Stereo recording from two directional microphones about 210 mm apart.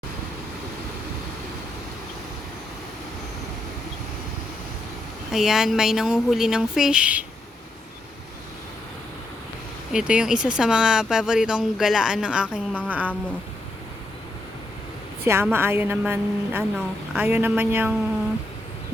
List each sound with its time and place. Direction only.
5.3 s speech: centre (ahead or behind)
9.9 s speech: 5° right (ahead or behind)
15.2 s a woman's voice: 10° right (ahead or behind)